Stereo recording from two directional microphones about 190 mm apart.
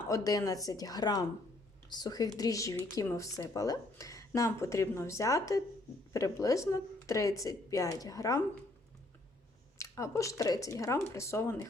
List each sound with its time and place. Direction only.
0.1 s speech: 20° left (ahead or behind)
9.7 s speech: 15° left (ahead or behind)